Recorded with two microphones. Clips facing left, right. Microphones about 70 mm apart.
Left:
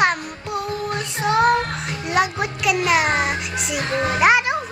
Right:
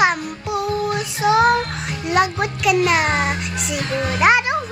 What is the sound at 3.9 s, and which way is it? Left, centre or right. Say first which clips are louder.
Music: left 2 dB; left.